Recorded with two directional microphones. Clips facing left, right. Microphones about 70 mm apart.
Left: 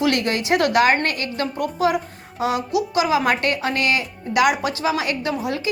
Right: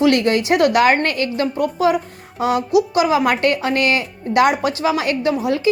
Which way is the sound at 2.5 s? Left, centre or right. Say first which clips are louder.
Right 7 dB; left.